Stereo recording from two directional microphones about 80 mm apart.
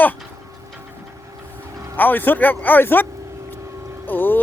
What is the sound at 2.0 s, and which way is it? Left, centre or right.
Speech, left.